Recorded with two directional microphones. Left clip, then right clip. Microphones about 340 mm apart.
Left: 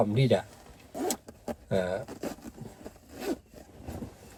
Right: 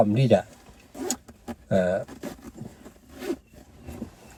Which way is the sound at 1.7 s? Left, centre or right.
Centre.